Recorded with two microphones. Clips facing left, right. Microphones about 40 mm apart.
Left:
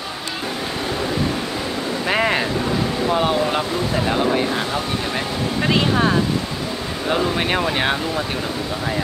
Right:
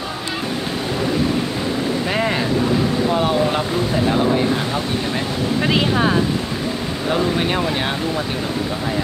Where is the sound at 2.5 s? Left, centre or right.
Centre.